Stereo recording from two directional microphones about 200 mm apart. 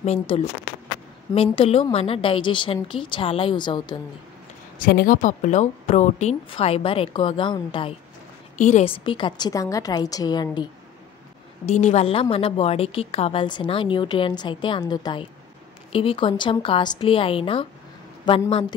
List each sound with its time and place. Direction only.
0.0 s a woman's voice: 30° left (ahead or behind)
4.7 s a woman's voice: 45° left (ahead or behind); by 7.9 s 25° left (ahead or behind)
8.5 s a woman's voice: 35° left (ahead or behind); by 10.7 s 20° left (ahead or behind)
11.6 s a woman's voice: 35° left (ahead or behind)